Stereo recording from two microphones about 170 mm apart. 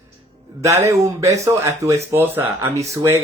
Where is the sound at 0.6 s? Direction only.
15° right (ahead or behind).